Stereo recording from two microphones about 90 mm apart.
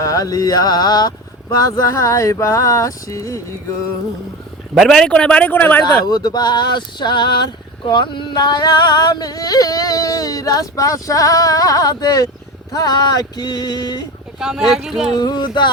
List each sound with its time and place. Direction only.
0.0 s a sound: 40° left (ahead or behind)
4.7 s a man's voice: centre (ahead or behind); by 5.8 s 20° left (ahead or behind)
6.1 s speech: 45° left (ahead or behind)
7.9 s yodeling: 60° left (ahead or behind)
14.3 s speech: 5° right (ahead or behind)
15.1 s yodeling: 50° left (ahead or behind)